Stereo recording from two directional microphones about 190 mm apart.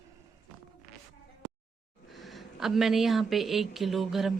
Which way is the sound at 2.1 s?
Centre (ahead or behind).